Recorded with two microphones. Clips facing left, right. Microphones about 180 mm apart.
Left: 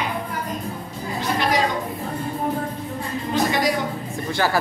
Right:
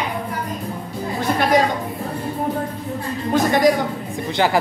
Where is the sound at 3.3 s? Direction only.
50° right (ahead or behind).